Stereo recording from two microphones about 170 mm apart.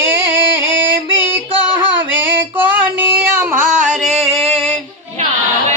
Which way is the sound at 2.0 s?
10° right (ahead or behind).